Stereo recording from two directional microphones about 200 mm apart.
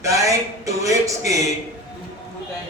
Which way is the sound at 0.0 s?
15° right (ahead or behind).